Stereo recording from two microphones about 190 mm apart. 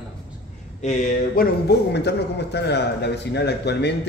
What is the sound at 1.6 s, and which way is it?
A man's voice, 60° left (ahead or behind).